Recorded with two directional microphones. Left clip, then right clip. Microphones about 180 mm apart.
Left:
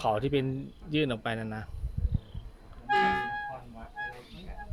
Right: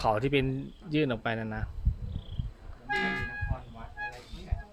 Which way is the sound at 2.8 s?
45° left (ahead or behind).